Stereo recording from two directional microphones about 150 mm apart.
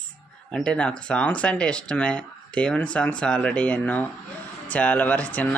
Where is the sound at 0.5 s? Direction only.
5° left (ahead or behind).